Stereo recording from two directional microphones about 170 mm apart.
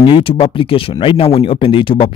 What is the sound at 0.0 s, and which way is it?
Speech, 30° left (ahead or behind).